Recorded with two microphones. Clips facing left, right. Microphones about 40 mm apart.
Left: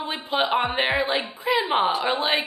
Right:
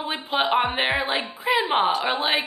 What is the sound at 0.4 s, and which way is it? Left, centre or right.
A woman's voice, centre.